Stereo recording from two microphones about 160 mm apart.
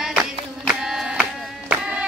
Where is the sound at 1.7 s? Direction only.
10° right (ahead or behind).